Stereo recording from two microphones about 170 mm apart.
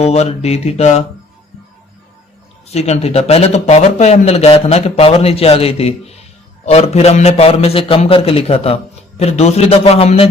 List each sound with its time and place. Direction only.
0.0 s a man's voice: 40° left (ahead or behind)
2.7 s a man's voice: 40° left (ahead or behind)